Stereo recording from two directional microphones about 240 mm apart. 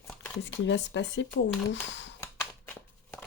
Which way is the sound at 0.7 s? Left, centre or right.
Left.